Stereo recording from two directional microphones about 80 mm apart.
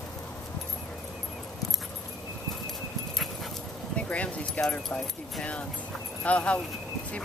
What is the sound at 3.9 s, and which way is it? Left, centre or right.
Speech, centre.